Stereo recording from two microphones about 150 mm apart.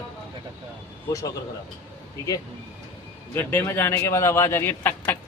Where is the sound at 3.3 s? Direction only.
15° left (ahead or behind).